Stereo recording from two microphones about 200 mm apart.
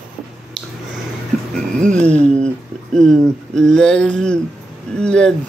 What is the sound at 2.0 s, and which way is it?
Speech, 35° right (ahead or behind).